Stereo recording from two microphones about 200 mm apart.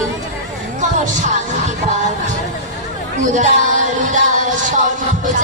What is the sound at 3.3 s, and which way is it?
Music, 40° right (ahead or behind).